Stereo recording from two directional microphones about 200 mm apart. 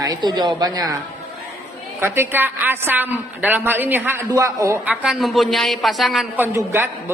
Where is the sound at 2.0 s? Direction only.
10° right (ahead or behind).